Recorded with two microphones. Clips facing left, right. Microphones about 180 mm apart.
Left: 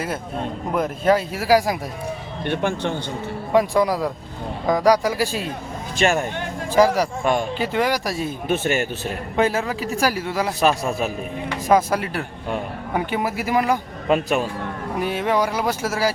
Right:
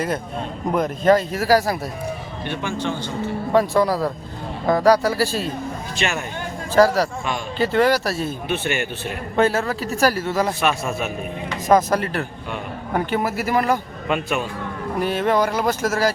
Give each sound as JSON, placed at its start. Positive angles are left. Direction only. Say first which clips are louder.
{"t": 0.7, "sound": "speech", "louder": "right 2 dB", "side_deg": 5}
{"t": 2.4, "sound": "speech", "louder": "left 4 dB", "side_deg": 55}
{"t": 3.5, "sound": "speech", "louder": "even", "side_deg": 15}
{"t": 6.0, "sound": "speech", "louder": "left 6 dB", "side_deg": 45}
{"t": 6.7, "sound": "speech", "louder": "right 1 dB", "side_deg": 15}
{"t": 8.4, "sound": "speech", "louder": "left 5 dB", "side_deg": 40}
{"t": 9.3, "sound": "speech", "louder": "right 2 dB", "side_deg": 10}
{"t": 10.6, "sound": "speech", "louder": "left 2 dB", "side_deg": 35}
{"t": 11.7, "sound": "speech", "louder": "right 1 dB", "side_deg": 10}
{"t": 14.1, "sound": "speech", "louder": "left 3 dB", "side_deg": 40}
{"t": 14.9, "sound": "speech", "louder": "right 2 dB", "side_deg": 10}